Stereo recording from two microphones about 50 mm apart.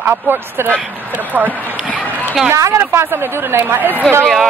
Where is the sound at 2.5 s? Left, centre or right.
Right.